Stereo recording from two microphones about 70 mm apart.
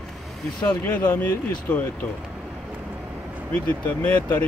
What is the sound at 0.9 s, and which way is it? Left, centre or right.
Speech, left.